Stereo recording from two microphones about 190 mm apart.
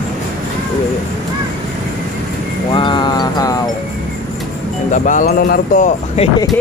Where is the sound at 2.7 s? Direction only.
25° left (ahead or behind).